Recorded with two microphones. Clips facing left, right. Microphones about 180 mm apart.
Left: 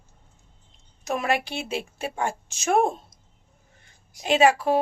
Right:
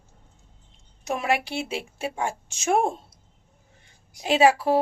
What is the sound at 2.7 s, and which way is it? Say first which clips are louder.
Speech: left 2 dB; 30° right (ahead or behind).